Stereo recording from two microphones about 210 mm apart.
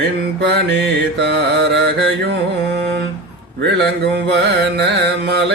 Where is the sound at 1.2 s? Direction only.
55° right (ahead or behind).